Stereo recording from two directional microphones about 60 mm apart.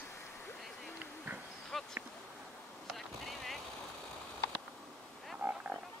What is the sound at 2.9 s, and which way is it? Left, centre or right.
Vehicle, centre.